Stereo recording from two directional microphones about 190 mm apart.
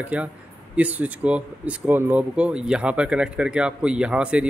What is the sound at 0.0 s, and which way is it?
A man's voice, 5° right (ahead or behind).